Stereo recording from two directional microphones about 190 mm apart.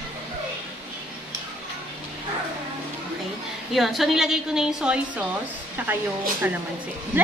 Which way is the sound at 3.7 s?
Centre (ahead or behind).